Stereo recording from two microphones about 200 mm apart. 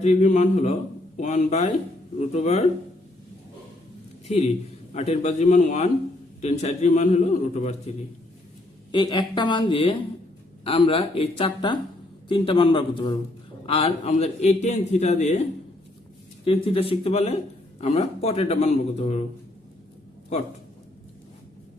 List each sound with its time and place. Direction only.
0.0 s a man's voice: 35° left (ahead or behind)
4.3 s a man's voice: 30° left (ahead or behind)
16.4 s a man's voice: 30° left (ahead or behind)